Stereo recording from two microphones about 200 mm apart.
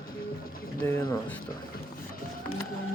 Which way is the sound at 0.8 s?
10° left (ahead or behind).